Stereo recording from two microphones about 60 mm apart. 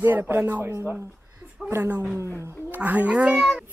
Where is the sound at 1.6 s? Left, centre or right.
Right.